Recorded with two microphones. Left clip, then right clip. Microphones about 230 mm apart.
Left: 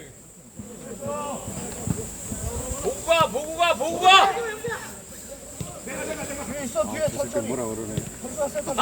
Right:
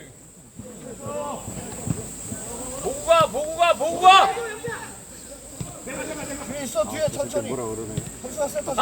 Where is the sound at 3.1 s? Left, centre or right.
Centre.